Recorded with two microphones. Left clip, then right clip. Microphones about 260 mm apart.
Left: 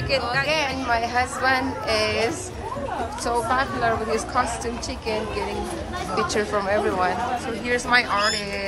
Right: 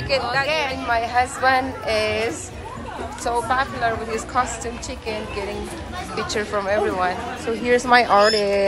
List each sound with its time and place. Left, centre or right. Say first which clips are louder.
0.1 s a woman's voice: right 2 dB; centre
6.1 s a woman's voice: left 1 dB; centre